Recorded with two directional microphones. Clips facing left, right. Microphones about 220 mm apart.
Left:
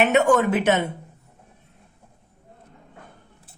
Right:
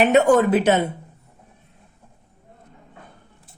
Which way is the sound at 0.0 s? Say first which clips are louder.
Right 3 dB; 35° right (ahead or behind).